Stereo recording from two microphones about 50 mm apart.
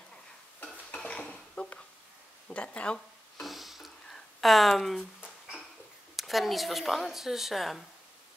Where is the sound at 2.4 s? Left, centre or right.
Left.